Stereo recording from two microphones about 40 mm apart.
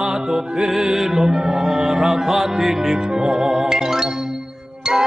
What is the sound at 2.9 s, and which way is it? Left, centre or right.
Music, centre.